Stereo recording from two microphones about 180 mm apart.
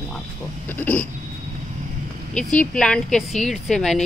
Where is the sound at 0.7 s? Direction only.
10° left (ahead or behind).